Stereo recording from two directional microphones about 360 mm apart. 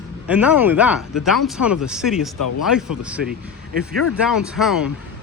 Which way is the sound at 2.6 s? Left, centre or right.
Centre.